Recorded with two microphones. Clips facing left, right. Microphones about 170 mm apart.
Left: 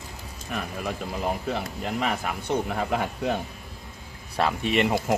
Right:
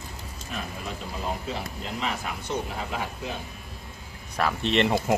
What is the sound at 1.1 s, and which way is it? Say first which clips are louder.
Speech: left 3 dB; 60° left (ahead or behind).